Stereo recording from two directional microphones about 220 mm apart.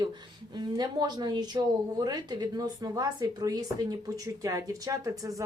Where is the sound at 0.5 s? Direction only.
20° right (ahead or behind).